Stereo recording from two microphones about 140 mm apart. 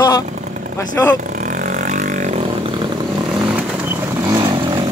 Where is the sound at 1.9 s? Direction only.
65° right (ahead or behind).